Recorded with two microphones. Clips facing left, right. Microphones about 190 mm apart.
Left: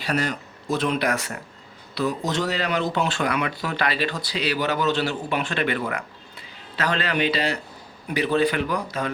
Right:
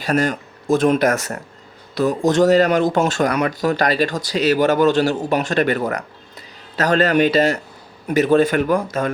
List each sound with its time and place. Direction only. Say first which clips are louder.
0.0 s speech: right 6 dB; 45° right (ahead or behind)